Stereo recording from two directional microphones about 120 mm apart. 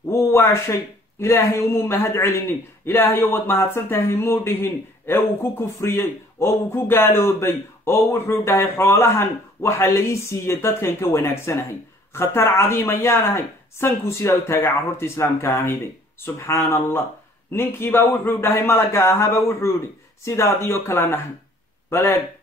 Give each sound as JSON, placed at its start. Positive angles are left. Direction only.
{"t": 0.1, "sound": "speech", "side_deg": 20}